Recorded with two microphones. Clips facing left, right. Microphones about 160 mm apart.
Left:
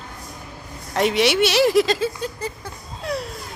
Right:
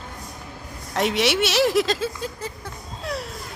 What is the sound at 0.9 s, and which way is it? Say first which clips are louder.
Speech: left 3 dB; centre (ahead or behind).